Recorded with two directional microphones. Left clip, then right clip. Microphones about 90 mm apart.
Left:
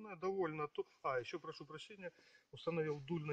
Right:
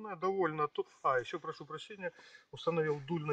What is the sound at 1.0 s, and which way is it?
Speech, 20° left (ahead or behind).